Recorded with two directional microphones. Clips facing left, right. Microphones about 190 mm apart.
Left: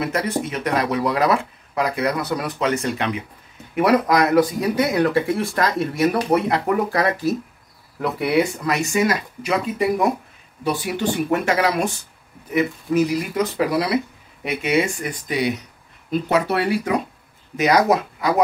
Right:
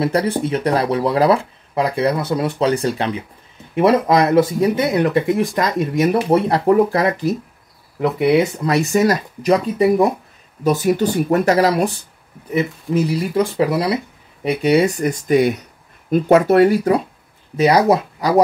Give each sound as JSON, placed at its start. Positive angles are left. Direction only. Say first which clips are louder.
{"t": 0.0, "sound": "speech", "louder": "right 5 dB", "side_deg": -30}
{"t": 8.7, "sound": "speech", "louder": "right 5 dB", "side_deg": -40}